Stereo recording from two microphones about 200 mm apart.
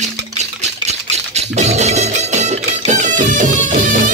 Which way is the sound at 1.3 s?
35° right (ahead or behind).